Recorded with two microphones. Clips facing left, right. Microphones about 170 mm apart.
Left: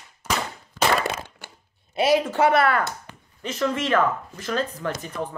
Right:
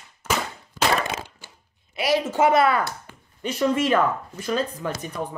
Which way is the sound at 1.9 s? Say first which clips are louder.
Left 3 dB; 25° left (ahead or behind).